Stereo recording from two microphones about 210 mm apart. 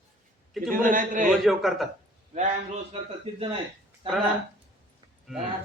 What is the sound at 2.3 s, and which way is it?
Speech, 35° right (ahead or behind).